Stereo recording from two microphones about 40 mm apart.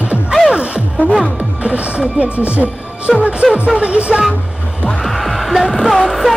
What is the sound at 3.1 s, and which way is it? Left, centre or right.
Music, centre.